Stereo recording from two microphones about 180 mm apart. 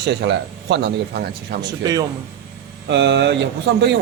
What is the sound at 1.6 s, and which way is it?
Speech, 20° right (ahead or behind).